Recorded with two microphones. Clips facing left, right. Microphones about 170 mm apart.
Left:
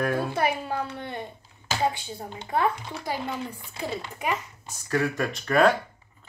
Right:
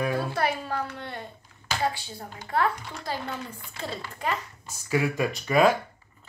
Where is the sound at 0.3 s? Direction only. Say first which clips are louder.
Left 1 dB; 15° left (ahead or behind).